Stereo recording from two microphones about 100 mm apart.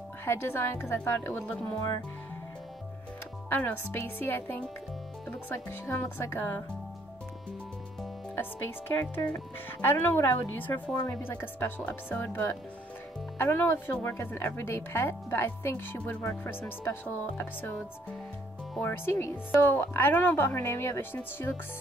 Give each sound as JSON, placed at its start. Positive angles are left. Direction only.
{"t": 0.2, "sound": "a woman's voice", "side_deg": 25}
{"t": 3.4, "sound": "a woman's voice", "side_deg": 20}
{"t": 8.4, "sound": "a woman's voice", "side_deg": 20}
{"t": 18.8, "sound": "a woman's voice", "side_deg": 20}